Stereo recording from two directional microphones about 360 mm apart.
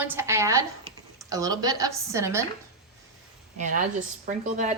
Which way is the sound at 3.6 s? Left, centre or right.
Right.